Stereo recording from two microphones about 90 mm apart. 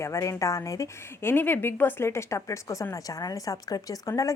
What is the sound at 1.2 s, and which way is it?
A woman's voice, 25° left (ahead or behind).